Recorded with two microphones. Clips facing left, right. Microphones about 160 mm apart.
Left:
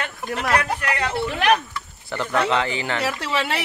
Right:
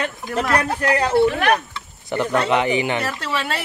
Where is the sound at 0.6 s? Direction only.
35° right (ahead or behind).